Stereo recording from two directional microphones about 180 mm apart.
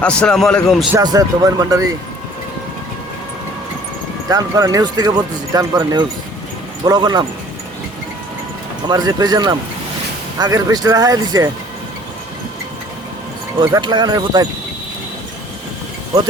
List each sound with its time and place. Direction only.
0.0 s a man's voice: 5° left (ahead or behind)
0.9 s speech: 20° right (ahead or behind)
4.3 s speech: 20° right (ahead or behind)
8.9 s speech: 20° right (ahead or behind)
13.6 s speech: 25° right (ahead or behind)